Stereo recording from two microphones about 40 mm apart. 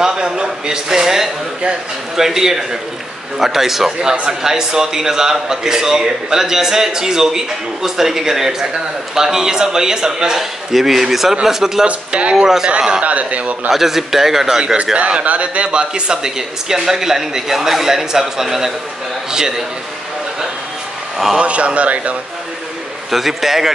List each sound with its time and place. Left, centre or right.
0.0 s speech: centre
11.8 s speech: right
13.0 s speech: right
13.7 s speech: centre
15.2 s speech: right; by 19.6 s centre
21.4 s speech: right
23.1 s speech: centre